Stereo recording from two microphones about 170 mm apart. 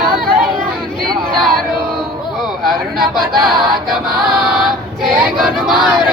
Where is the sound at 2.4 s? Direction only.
Centre (ahead or behind).